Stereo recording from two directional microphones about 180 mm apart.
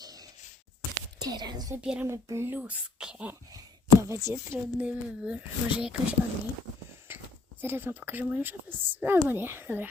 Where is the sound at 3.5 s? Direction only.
20° right (ahead or behind).